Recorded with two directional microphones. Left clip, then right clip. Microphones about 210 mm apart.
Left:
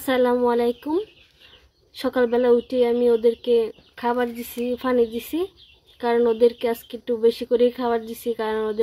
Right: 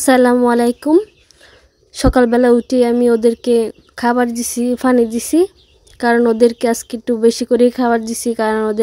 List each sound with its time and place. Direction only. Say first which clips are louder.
0.0 s speech: right 8 dB; 55° right (ahead or behind)